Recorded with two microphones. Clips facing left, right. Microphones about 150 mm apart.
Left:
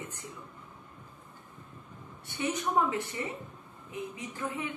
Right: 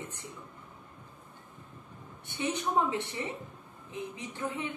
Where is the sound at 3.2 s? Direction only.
25° right (ahead or behind).